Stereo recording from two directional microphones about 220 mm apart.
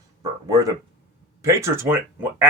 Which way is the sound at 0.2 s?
15° right (ahead or behind).